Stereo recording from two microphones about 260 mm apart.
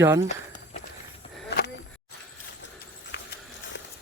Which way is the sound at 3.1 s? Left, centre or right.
Left.